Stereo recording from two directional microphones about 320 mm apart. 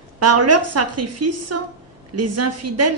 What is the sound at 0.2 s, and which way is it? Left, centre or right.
A woman's voice, right.